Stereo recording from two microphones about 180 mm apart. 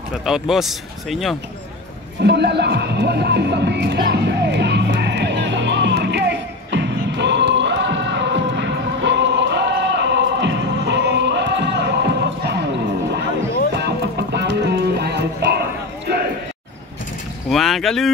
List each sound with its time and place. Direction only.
0.2 s speech: centre (ahead or behind)
2.2 s music: 70° right (ahead or behind)
13.7 s music: 65° right (ahead or behind)
17.5 s speech: centre (ahead or behind)